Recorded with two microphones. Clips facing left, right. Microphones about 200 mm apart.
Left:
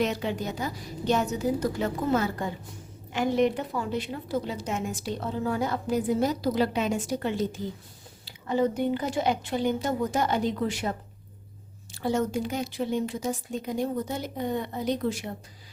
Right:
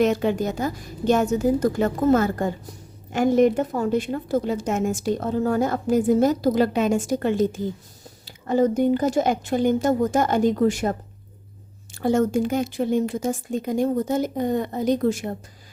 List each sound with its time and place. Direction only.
0.0 s a woman's voice: 50° right (ahead or behind)
11.9 s a woman's voice: 50° right (ahead or behind)